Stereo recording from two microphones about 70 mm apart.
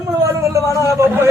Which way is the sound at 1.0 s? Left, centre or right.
Right.